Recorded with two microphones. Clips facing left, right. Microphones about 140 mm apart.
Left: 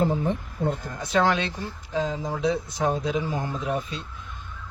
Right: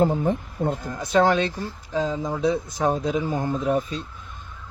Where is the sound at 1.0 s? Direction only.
40° right (ahead or behind).